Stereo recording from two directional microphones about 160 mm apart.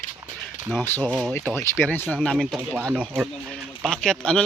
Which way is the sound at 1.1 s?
5° right (ahead or behind).